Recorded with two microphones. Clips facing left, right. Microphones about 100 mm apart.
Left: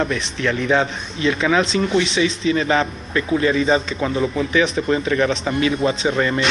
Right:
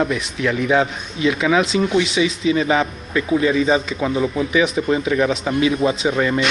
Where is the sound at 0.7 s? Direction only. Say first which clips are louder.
Right 1 dB; 10° right (ahead or behind).